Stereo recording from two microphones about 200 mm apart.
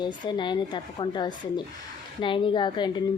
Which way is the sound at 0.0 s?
25° left (ahead or behind).